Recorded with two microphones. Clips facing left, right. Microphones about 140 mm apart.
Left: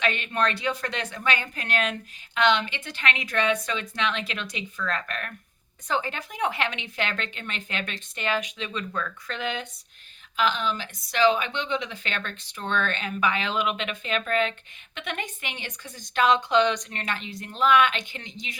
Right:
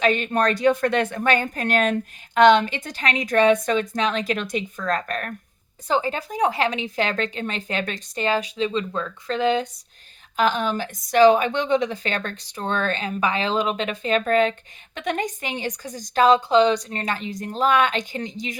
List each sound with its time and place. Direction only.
0.0 s a woman's voice: 40° right (ahead or behind)
10.3 s a woman's voice: 45° right (ahead or behind)